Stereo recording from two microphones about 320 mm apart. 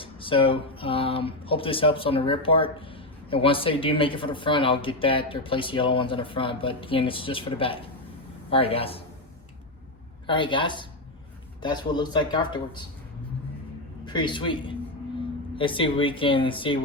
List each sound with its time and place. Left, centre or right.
0.0 s speech: centre
10.2 s speech: centre
14.0 s a man's voice: centre